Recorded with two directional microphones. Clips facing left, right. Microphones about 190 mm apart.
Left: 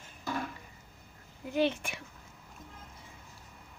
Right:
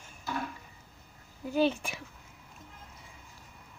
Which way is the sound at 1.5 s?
35° right (ahead or behind).